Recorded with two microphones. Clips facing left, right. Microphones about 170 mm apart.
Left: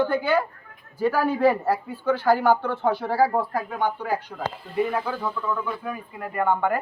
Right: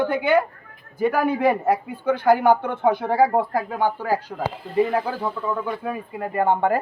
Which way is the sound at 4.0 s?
40° right (ahead or behind).